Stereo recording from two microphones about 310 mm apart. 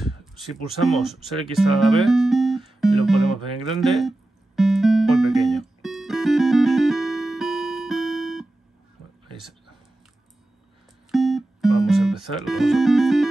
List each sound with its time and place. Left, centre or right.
0.7 s speech: centre
1.7 s music: centre
3.8 s speech: centre
4.6 s music: centre
11.1 s music: centre